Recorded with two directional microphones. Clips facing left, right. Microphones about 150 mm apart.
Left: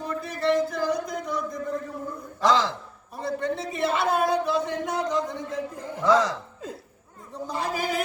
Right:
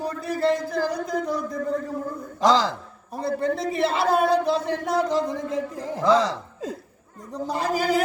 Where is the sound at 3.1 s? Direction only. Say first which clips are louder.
Right 4 dB; 35° right (ahead or behind).